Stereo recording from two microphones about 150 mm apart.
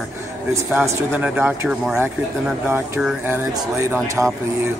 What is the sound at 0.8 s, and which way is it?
Speech, 10° right (ahead or behind).